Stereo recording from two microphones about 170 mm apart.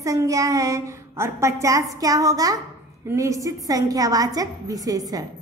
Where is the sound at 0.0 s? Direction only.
20° right (ahead or behind).